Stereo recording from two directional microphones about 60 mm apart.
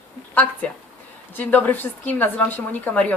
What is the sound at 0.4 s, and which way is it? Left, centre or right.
A man's voice, left.